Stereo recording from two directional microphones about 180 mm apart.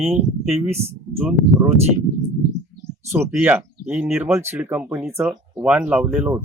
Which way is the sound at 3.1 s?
10° right (ahead or behind).